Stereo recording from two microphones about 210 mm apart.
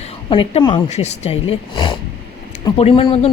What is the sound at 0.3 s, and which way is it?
A woman's voice, 25° left (ahead or behind).